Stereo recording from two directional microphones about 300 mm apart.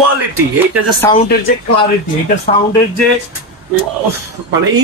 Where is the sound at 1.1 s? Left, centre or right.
Centre.